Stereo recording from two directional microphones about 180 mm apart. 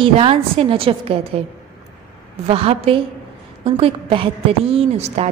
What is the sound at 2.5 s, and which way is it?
A woman's voice, 30° right (ahead or behind).